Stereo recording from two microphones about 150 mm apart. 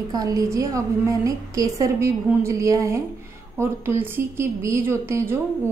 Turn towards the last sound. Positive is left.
turn(degrees=-15)  # may be behind; listen again after turning